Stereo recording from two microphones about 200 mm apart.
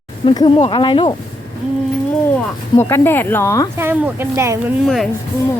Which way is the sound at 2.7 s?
10° left (ahead or behind).